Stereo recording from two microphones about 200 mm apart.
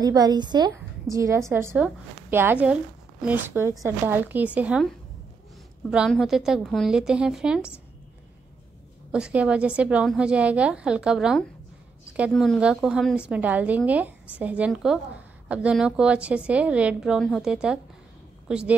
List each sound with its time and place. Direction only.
0.0 s a woman's voice: 20° right (ahead or behind); by 7.7 s 5° right (ahead or behind)
9.1 s a woman's voice: 5° right (ahead or behind)